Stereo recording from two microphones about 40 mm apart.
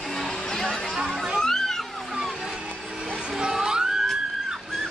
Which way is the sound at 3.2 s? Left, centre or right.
Centre.